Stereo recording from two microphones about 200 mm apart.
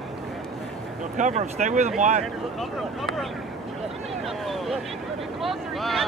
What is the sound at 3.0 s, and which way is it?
Speech, centre (ahead or behind).